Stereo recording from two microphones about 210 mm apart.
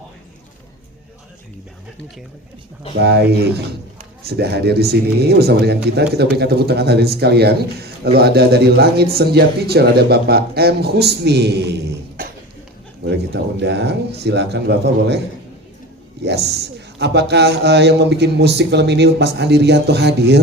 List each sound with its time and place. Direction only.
3.0 s a man's voice: 50° right (ahead or behind)
13.1 s a man's voice: 55° right (ahead or behind)
16.2 s a man's voice: 50° right (ahead or behind)